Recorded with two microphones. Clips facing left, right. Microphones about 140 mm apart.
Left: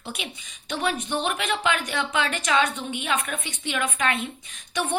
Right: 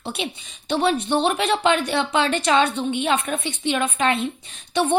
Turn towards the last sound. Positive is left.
turn(degrees=-30)  # may be behind; listen again after turning